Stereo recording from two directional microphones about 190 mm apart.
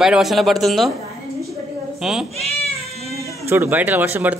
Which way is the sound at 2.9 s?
35° left (ahead or behind).